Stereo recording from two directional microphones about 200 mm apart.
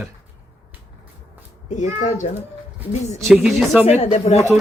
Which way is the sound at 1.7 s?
35° left (ahead or behind).